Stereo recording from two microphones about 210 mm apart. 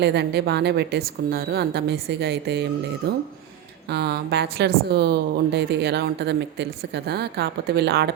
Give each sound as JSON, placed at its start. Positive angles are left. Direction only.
{"t": 0.0, "sound": "a woman's voice", "side_deg": -55}